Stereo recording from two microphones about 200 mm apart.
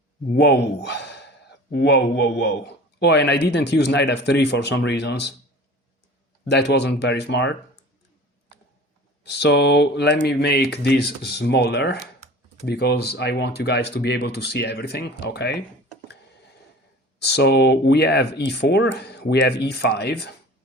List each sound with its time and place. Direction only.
0.3 s a man's voice: 55° left (ahead or behind)
6.4 s a man's voice: 55° left (ahead or behind)
9.2 s a man's voice: 60° left (ahead or behind)
17.2 s a man's voice: 55° left (ahead or behind)